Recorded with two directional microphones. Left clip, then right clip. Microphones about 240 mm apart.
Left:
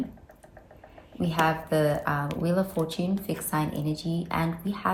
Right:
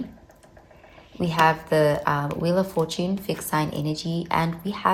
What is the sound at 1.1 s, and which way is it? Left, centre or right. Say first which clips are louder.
A woman's voice: right 5 dB; right.